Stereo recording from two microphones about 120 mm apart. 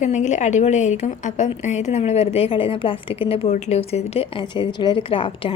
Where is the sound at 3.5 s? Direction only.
85° left.